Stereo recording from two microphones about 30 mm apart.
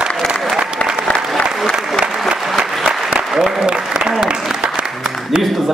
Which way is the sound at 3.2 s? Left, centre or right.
Centre.